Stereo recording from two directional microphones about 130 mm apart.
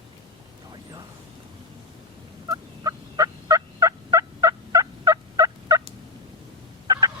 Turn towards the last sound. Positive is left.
turn(degrees=-30)  # may be behind; listen again after turning